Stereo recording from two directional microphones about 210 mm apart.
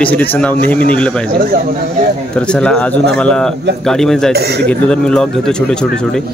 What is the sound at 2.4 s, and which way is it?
Speech, 5° left (ahead or behind).